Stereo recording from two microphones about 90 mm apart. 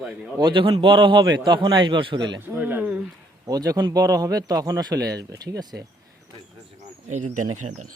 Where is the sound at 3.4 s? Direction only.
40° right (ahead or behind).